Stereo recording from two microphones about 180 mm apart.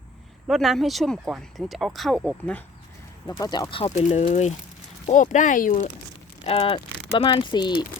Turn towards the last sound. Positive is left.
turn(degrees=25)  # may be behind; listen again after turning